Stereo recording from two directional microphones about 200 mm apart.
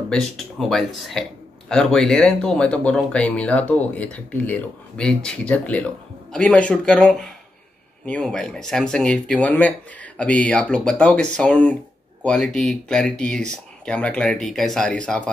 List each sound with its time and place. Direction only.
0.1 s speech: centre (ahead or behind)